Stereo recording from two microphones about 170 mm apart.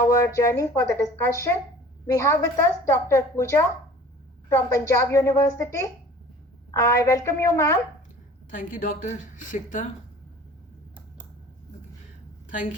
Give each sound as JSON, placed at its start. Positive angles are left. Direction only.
{"t": 0.0, "sound": "a woman's voice", "side_deg": 15}
{"t": 8.4, "sound": "a woman's voice", "side_deg": 50}